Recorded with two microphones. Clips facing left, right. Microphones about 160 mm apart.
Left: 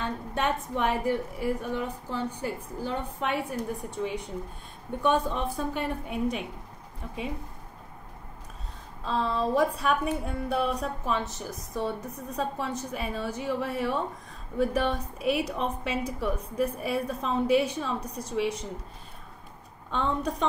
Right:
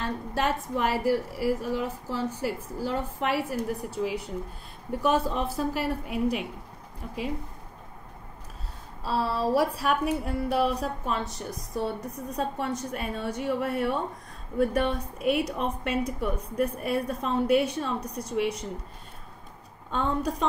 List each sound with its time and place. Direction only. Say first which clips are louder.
0.0 s a woman's voice: right 1 dB; 5° right (ahead or behind)
9.0 s a woman's voice: right 1 dB; 10° right (ahead or behind)
20.0 s a woman's voice: right 1 dB; centre (ahead or behind)